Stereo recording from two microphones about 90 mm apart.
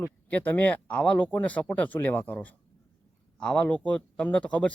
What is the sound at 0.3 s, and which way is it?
Speech, 15° left (ahead or behind).